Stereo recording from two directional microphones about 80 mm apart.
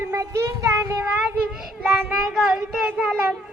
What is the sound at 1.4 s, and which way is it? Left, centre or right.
Child singing, centre.